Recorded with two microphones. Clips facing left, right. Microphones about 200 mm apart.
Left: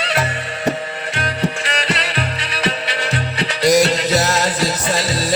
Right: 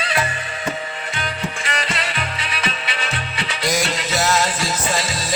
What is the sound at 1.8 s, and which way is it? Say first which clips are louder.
Music: left 4 dB; 35° left (ahead or behind).